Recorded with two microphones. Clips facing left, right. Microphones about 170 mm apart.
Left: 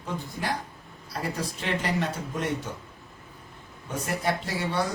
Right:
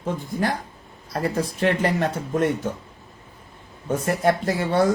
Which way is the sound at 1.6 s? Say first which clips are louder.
Right 7 dB; 50° right (ahead or behind).